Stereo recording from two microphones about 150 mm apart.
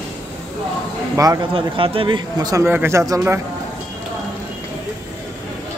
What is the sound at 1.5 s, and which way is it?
A man's voice, 35° right (ahead or behind).